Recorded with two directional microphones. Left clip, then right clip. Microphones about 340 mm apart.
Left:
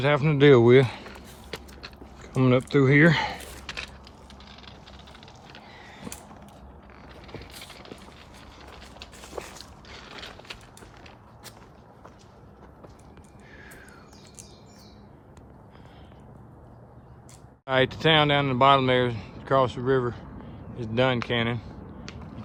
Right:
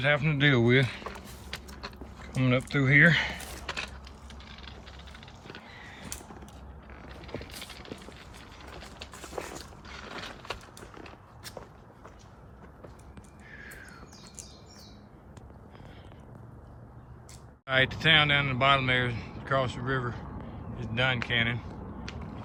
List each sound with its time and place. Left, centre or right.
0.0 s speech: centre
2.2 s speech: centre
5.6 s a sound: centre
7.3 s vehicle: left
13.6 s a sound: centre
17.7 s speech: centre